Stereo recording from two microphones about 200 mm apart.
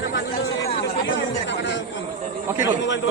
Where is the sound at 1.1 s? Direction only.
65° left (ahead or behind).